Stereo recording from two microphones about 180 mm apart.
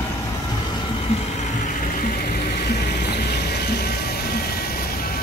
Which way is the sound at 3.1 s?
60° left (ahead or behind).